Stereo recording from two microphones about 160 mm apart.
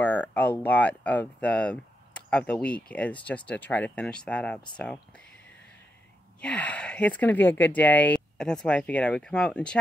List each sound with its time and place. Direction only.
0.0 s speech: 10° left (ahead or behind)
6.4 s speech: 10° left (ahead or behind)